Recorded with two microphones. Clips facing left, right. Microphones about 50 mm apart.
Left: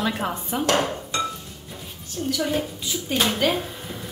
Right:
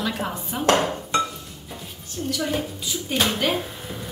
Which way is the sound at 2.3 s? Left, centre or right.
Centre.